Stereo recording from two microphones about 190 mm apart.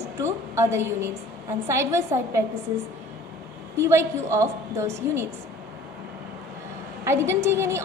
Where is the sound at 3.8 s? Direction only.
15° right (ahead or behind).